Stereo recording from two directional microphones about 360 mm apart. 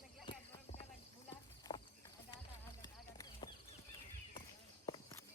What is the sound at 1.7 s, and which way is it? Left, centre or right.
Clip-clop, centre.